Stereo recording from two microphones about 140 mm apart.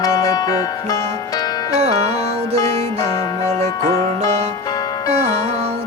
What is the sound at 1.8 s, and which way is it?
Music, 55° right (ahead or behind).